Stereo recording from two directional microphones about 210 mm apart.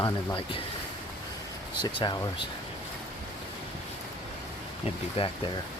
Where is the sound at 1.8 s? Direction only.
20° left (ahead or behind).